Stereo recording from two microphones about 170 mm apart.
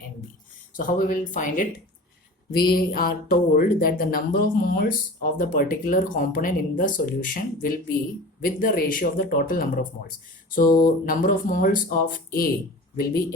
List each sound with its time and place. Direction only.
0.8 s speech: 55° left (ahead or behind)
2.6 s speech: 60° left (ahead or behind)